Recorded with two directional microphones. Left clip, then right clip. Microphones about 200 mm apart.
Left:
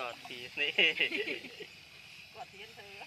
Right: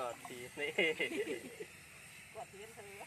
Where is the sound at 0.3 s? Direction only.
30° right (ahead or behind).